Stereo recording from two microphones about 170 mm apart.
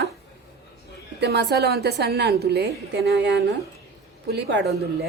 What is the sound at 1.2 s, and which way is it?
A woman's voice, 80° right.